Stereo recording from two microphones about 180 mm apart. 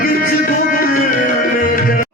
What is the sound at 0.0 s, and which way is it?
Music, 50° left (ahead or behind).